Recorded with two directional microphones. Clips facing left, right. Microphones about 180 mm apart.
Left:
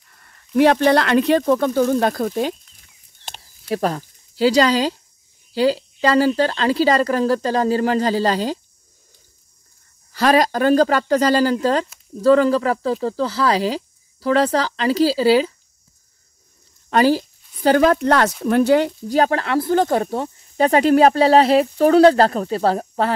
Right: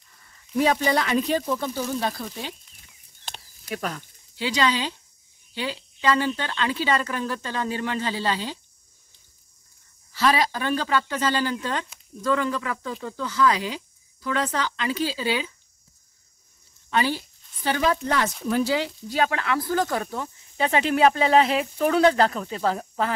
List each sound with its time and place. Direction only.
0.1 s speech: 60° left (ahead or behind)
3.6 s speech: 35° left (ahead or behind)
10.1 s speech: 45° left (ahead or behind)
16.9 s a woman's voice: 40° left (ahead or behind); by 18.3 s 70° left (ahead or behind)
18.4 s speech: 60° left (ahead or behind); by 23.1 s 35° left (ahead or behind)